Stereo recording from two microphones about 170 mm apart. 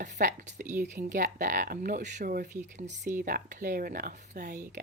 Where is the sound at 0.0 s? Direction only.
50° right (ahead or behind).